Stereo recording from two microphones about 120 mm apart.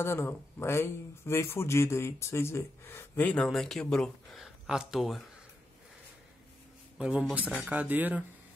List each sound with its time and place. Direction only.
0.0 s speech: 20° left (ahead or behind)
3.3 s speech: 5° left (ahead or behind)
7.0 s speech: 5° right (ahead or behind)